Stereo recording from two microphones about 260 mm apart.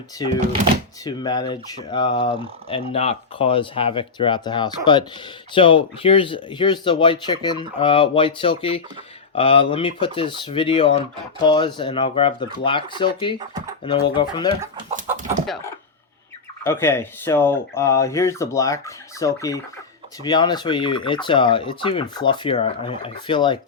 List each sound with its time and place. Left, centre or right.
0.2 s speech: centre
15.4 s speech: centre